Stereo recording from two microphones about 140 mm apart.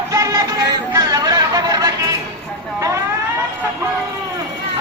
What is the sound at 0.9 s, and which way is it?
Chatter, 25° right (ahead or behind).